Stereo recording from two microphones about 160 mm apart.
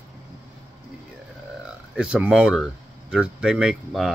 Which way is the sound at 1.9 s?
5° right (ahead or behind).